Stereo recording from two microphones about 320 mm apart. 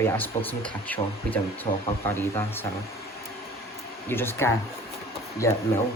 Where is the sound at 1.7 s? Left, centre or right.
Centre.